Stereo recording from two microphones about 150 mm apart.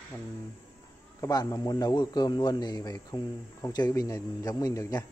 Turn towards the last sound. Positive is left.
turn(degrees=20)  # may be behind; listen again after turning